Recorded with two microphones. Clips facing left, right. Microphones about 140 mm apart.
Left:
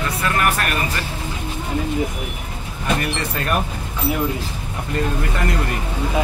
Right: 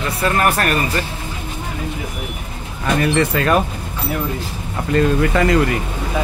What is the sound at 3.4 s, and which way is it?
Speech, 90° right.